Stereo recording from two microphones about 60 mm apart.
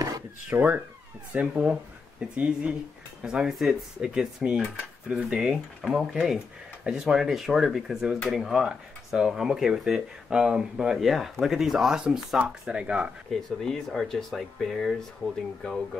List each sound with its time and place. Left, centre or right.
0.5 s speech: right
1.5 s speech: right
5.4 s speech: centre
13.3 s speech: centre